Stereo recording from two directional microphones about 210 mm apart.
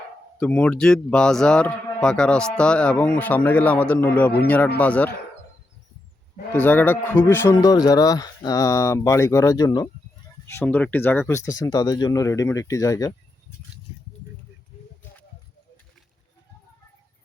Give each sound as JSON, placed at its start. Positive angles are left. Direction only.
{"t": 0.3, "sound": "speech", "side_deg": 5}
{"t": 6.5, "sound": "speech", "side_deg": 10}